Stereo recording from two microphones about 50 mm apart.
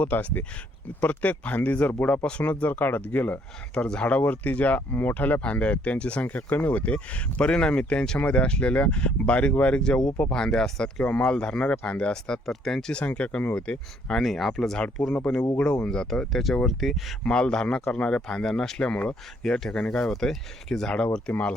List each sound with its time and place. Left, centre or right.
0.0 s speech: left
2.4 s speech: left
3.8 s speech: centre
4.1 s speech: left
6.3 s speech: left; by 11.0 s centre
11.0 s speech: left
12.1 s speech: centre
12.9 s speech: left
14.1 s speech: centre
15.4 s speech: left
16.0 s speech: centre
17.2 s speech: centre
19.8 s speech: left
20.1 s speech: centre